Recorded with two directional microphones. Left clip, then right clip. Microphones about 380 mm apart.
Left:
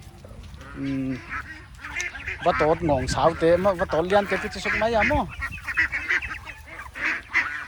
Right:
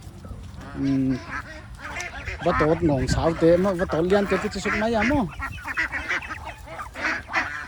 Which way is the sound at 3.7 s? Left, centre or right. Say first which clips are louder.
Left 1 dB; centre.